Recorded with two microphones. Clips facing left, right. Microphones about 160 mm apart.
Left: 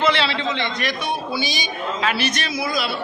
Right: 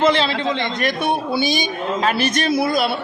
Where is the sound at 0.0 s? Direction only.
45° right (ahead or behind).